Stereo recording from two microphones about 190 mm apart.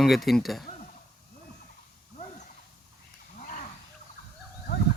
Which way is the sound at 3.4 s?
40° left (ahead or behind).